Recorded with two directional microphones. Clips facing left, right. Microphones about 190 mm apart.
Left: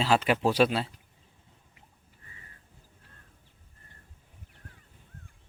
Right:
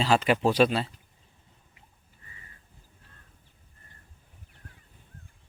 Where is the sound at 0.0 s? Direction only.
5° left (ahead or behind).